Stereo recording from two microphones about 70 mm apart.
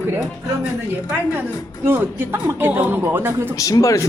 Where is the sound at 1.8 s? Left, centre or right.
Right.